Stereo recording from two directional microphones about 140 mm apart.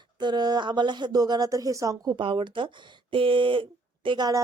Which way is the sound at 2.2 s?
35° right (ahead or behind).